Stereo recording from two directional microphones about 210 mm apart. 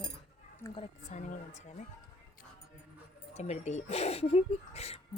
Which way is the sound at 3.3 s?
30° left (ahead or behind).